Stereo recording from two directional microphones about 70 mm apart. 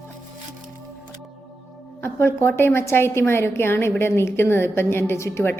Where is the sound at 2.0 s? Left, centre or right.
Left.